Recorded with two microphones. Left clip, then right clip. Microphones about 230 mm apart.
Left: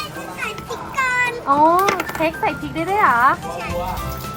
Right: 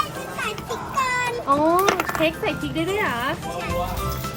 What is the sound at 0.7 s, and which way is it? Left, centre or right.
Music, centre.